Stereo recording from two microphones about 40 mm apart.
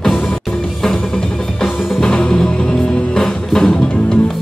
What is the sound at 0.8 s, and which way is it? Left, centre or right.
Music, centre.